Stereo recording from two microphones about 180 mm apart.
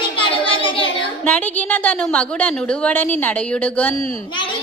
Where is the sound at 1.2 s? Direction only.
10° left (ahead or behind).